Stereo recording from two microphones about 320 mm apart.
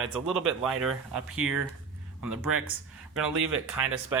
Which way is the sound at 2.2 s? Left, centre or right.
Right.